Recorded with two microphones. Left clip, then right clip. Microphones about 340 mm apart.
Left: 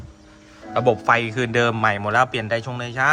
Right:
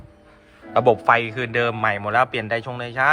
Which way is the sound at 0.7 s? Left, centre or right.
Centre.